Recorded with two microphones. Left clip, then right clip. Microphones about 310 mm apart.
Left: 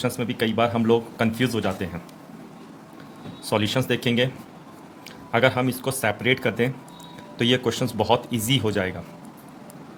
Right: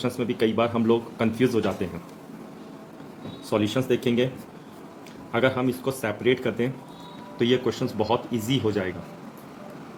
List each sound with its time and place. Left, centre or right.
0.0 s speech: left
3.5 s speech: left
5.3 s speech: left